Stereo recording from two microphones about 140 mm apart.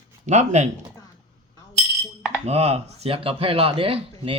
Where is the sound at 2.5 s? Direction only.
50° right (ahead or behind).